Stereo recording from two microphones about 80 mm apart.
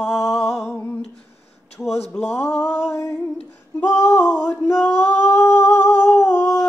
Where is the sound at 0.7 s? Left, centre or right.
Left.